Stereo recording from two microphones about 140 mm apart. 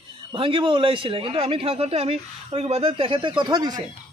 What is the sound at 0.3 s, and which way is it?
Speech, 40° right (ahead or behind).